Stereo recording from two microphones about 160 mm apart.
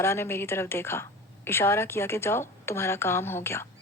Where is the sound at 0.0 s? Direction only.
15° left (ahead or behind).